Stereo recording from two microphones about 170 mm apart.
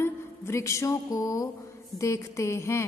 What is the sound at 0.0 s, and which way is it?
A woman's voice, 15° left (ahead or behind).